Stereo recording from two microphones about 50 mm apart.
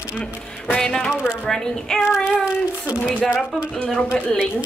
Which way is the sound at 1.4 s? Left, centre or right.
Centre.